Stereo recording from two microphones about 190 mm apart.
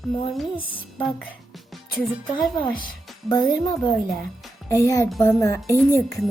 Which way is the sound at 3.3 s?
20° left (ahead or behind).